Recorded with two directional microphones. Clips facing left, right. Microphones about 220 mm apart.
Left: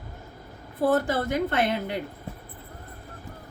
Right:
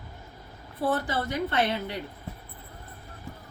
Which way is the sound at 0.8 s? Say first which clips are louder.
Left 5 dB; 45° left (ahead or behind).